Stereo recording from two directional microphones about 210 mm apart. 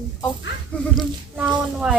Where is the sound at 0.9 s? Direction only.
5° right (ahead or behind).